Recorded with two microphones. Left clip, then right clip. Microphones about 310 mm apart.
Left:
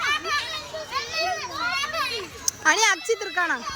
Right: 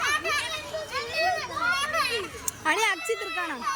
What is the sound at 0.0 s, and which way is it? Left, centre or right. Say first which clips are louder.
Children playing: left 1 dB; centre.